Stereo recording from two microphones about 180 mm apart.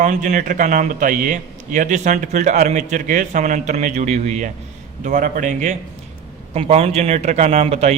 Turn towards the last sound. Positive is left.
turn(degrees=-35)  # may be behind; listen again after turning